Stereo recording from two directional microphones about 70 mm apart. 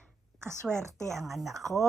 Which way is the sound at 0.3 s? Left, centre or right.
Right.